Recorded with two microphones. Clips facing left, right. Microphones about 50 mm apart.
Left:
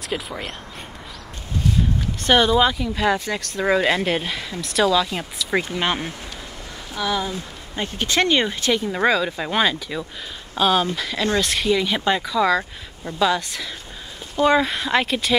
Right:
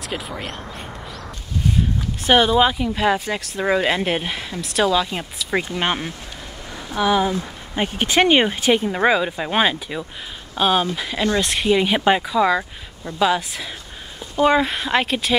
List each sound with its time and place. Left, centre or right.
0.1 s speech: centre
2.2 s speech: centre
4.6 s speech: centre
6.9 s speech: right; by 15.3 s centre